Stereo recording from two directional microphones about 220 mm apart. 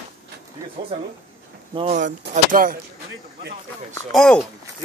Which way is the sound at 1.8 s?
35° right (ahead or behind).